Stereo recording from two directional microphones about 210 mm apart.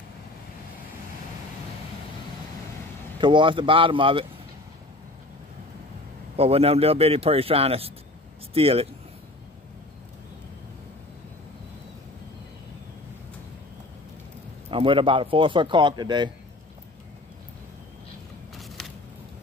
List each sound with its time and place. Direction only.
3.2 s a man's voice: 20° right (ahead or behind)
6.3 s a man's voice: 30° right (ahead or behind)
14.7 s a man's voice: 25° right (ahead or behind)
18.5 s a sound: centre (ahead or behind)